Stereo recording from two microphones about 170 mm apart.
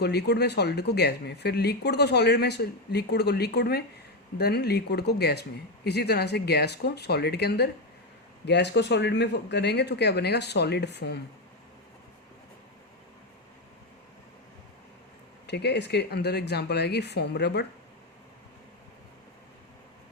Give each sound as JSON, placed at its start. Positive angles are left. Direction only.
{"t": 0.0, "sound": "speech", "side_deg": 75}
{"t": 8.4, "sound": "speech", "side_deg": 90}
{"t": 15.4, "sound": "speech", "side_deg": 80}